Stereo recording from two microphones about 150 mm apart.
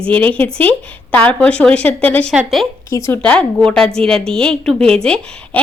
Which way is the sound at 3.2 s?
5° left (ahead or behind).